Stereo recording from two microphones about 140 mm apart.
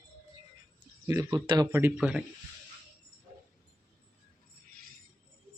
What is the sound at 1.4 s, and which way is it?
Speech, 35° right (ahead or behind).